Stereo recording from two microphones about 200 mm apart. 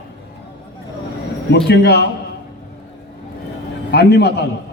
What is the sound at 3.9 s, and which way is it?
Speech, 55° left (ahead or behind).